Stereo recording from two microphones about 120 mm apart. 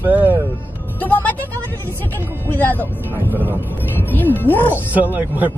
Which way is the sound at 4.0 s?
15° left (ahead or behind).